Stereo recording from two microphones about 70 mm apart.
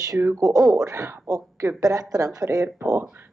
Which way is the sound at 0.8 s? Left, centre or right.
Right.